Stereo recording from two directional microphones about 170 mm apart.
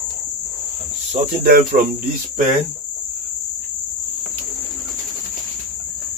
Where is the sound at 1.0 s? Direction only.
60° right (ahead or behind).